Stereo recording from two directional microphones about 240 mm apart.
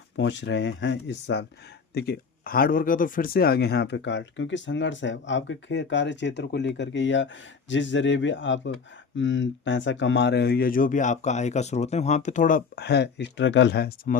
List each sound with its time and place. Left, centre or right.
0.2 s speech: left